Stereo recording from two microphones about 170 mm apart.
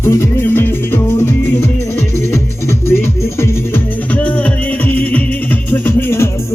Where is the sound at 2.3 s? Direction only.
15° left (ahead or behind).